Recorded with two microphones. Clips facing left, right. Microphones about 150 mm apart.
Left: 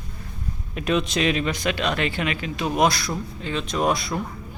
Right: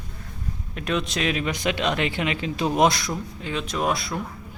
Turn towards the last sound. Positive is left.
turn(degrees=0)  # may be behind; listen again after turning